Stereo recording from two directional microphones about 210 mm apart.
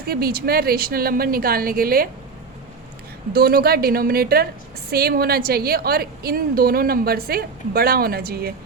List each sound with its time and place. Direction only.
0.1 s a woman's voice: 45° right (ahead or behind)
3.3 s a woman's voice: 45° right (ahead or behind)